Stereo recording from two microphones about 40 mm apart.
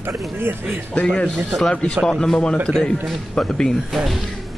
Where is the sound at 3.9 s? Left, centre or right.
Centre.